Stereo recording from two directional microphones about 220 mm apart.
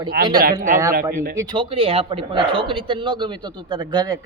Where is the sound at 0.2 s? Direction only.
40° right (ahead or behind).